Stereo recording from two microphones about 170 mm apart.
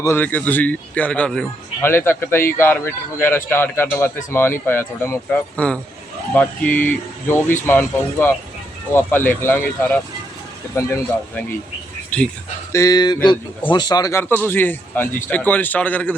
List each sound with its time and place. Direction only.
0.0 s a man's voice: 10° left (ahead or behind)
12.7 s a man's voice: 20° left (ahead or behind)